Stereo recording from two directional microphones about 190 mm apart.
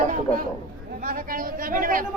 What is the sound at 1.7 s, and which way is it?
Speech, 45° right (ahead or behind).